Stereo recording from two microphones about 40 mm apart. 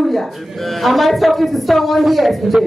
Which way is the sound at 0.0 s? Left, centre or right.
Centre.